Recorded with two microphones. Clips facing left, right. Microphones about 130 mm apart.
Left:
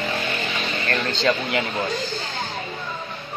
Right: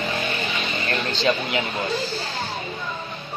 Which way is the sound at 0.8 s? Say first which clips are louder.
Left 1 dB; 10° right (ahead or behind).